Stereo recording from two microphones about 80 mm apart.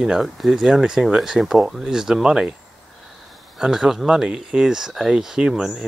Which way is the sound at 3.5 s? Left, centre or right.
Centre.